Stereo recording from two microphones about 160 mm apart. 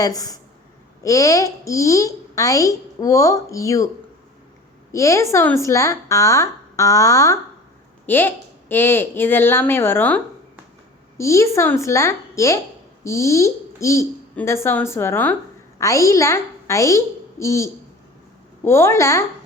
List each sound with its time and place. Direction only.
0.0 s a woman's voice: 25° left (ahead or behind)
4.9 s a woman's voice: 20° left (ahead or behind)
11.2 s a woman's voice: 20° left (ahead or behind)